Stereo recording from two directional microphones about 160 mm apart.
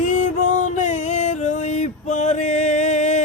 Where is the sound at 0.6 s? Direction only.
50° left (ahead or behind).